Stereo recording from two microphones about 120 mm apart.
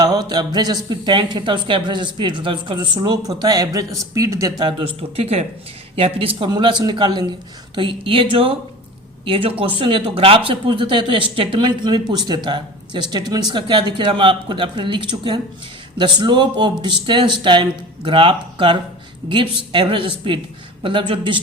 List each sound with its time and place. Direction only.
0.0 s speech: 35° right (ahead or behind)
4.9 s speech: 55° right (ahead or behind)